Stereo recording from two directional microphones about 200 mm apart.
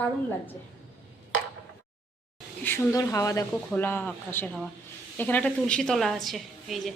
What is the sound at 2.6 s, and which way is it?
A woman's voice, 15° left (ahead or behind).